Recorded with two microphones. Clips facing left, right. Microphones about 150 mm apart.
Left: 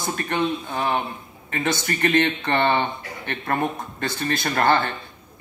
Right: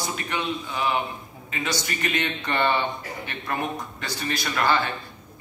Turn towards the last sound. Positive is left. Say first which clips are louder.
# left 3 dB
turn(degrees=55)  # may be behind; listen again after turning